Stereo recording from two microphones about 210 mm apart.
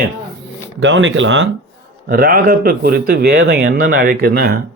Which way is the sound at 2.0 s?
45° right (ahead or behind).